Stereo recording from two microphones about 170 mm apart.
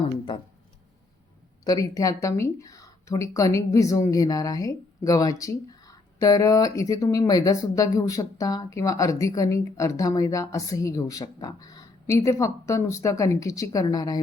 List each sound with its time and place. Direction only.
1.6 s speech: 20° left (ahead or behind)